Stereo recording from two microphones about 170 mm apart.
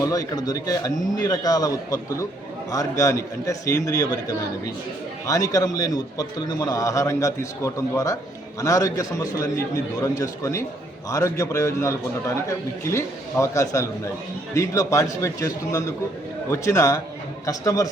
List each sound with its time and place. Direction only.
0.0 s a man's voice: 20° left (ahead or behind)